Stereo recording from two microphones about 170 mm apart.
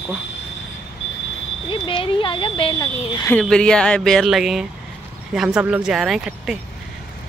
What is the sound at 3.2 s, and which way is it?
Speech, 10° left (ahead or behind).